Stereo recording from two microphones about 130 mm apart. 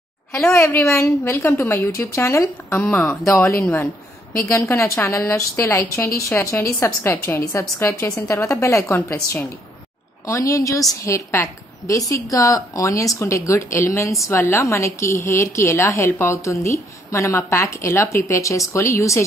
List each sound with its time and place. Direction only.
0.5 s a woman's voice: 20° left (ahead or behind)